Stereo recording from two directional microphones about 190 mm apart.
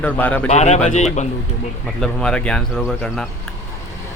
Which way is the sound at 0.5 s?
35° left (ahead or behind).